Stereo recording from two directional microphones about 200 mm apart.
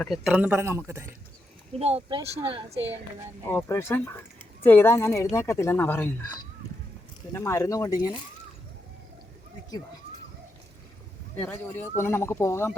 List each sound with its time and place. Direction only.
0.0 s speech: centre (ahead or behind)
1.8 s speech: 30° right (ahead or behind)
3.5 s speech: 15° left (ahead or behind)
11.3 s speech: 10° left (ahead or behind)